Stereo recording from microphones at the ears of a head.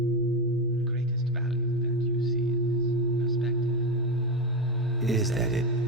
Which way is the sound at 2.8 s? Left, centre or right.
Right.